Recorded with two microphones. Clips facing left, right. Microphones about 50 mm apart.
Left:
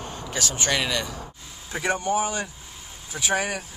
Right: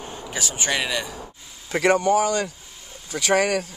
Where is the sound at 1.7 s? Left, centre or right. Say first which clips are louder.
Right 6 dB; right.